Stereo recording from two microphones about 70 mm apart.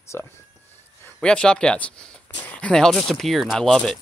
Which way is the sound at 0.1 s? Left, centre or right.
Left.